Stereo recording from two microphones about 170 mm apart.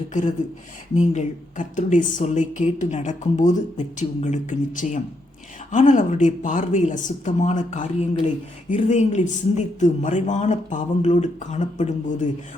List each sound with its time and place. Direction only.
0.1 s a woman's voice: 45° left (ahead or behind)